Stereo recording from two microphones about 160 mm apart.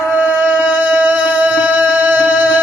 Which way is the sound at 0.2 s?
10° right (ahead or behind).